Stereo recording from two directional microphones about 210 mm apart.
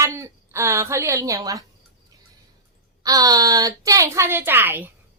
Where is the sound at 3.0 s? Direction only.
15° right (ahead or behind).